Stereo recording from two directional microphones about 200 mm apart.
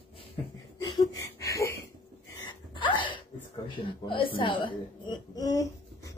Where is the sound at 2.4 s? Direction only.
25° left (ahead or behind).